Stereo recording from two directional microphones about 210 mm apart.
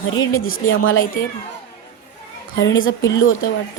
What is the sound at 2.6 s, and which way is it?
Speech, 65° left (ahead or behind).